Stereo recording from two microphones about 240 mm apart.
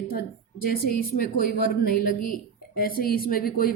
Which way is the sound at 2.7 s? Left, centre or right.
Left.